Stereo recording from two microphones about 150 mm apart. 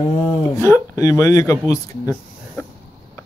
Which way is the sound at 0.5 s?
20° left (ahead or behind).